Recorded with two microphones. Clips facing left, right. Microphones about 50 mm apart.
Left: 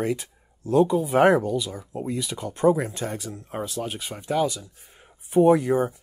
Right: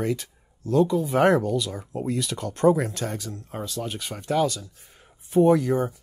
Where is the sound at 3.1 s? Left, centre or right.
Centre.